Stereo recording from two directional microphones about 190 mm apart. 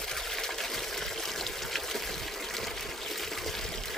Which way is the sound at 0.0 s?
Centre (ahead or behind).